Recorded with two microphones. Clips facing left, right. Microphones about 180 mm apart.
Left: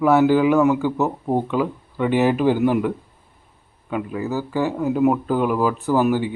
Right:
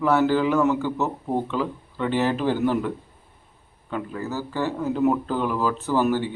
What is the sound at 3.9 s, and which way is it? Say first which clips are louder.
A man's voice: left 5 dB; 10° left (ahead or behind).